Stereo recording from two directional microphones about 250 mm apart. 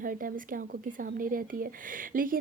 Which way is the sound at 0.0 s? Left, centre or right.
Right.